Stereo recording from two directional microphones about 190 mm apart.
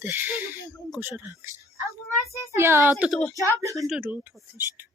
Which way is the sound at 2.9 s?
Centre (ahead or behind).